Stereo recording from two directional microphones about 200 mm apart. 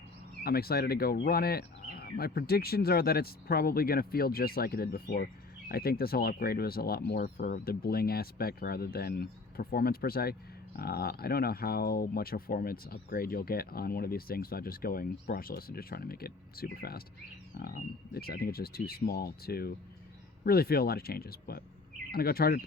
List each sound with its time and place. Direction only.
0.4 s speech: 50° left (ahead or behind)